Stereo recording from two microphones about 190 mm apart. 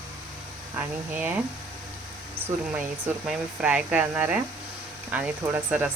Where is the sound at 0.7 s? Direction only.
10° right (ahead or behind).